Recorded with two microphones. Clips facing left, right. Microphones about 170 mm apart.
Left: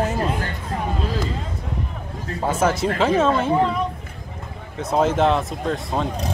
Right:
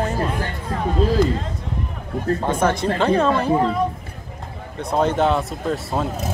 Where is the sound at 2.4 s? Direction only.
5° left (ahead or behind).